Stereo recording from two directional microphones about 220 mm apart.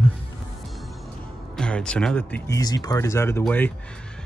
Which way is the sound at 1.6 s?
5° left (ahead or behind).